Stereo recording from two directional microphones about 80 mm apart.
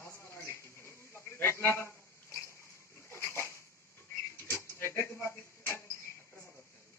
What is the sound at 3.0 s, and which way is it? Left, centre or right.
Dog, left.